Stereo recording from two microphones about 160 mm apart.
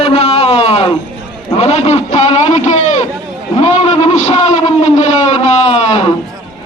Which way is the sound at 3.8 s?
45° left (ahead or behind).